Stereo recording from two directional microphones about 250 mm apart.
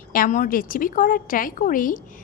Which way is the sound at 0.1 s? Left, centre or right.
Left.